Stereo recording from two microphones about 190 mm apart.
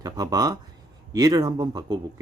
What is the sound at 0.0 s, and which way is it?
Speech, 20° right (ahead or behind).